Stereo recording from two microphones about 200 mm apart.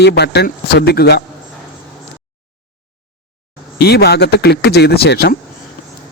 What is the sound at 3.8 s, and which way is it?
Speech, 55° left (ahead or behind).